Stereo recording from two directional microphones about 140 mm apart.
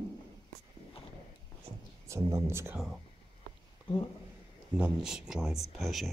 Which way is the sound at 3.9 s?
40° left (ahead or behind).